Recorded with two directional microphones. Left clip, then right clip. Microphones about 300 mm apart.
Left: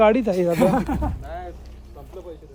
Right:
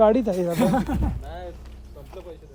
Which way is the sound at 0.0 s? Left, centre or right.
Left.